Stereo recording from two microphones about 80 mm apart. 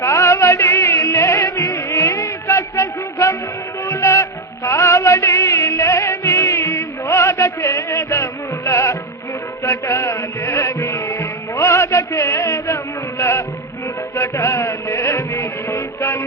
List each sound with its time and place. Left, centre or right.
0.0 s music: left
1.4 s music: left
1.7 s music: left